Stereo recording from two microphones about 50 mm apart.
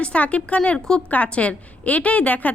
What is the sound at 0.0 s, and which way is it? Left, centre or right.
A woman's voice, left.